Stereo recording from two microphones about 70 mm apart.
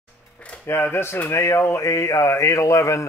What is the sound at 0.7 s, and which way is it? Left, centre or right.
A man's voice, left.